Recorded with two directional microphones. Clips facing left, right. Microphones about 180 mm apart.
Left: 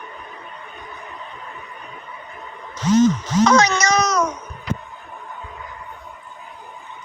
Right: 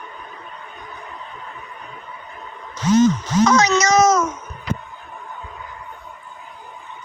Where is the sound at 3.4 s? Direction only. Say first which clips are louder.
Even; 60° left (ahead or behind).